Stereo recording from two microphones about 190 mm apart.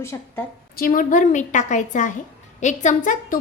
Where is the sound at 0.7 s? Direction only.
45° left (ahead or behind).